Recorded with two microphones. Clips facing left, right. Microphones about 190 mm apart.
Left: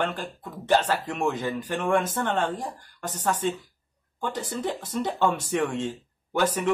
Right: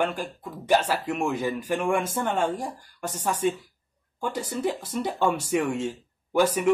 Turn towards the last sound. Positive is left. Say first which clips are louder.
# right 3 dB
turn(degrees=-10)  # may be behind; listen again after turning